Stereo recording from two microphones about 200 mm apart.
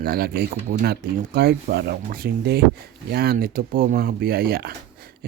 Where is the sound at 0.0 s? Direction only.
50° right (ahead or behind).